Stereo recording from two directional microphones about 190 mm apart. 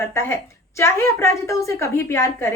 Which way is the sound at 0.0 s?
15° left (ahead or behind).